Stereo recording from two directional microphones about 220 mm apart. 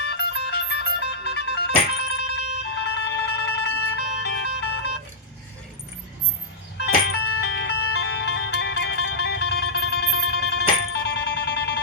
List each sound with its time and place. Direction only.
0.0 s music: 50° left (ahead or behind)
7.3 s music: 50° left (ahead or behind)